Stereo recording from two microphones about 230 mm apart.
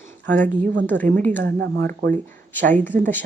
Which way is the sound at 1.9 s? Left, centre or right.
Right.